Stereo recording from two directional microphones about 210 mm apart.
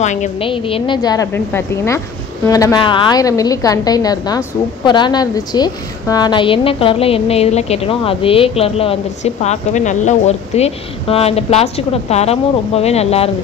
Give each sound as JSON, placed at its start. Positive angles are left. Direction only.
{"t": 0.0, "sound": "a woman's voice", "side_deg": 35}